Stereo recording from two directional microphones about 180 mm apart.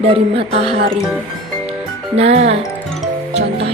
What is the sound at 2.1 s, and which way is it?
Speech, 35° right (ahead or behind).